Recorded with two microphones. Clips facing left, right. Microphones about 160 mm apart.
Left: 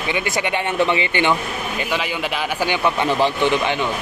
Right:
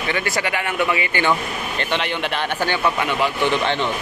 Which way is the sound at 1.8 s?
5° left (ahead or behind).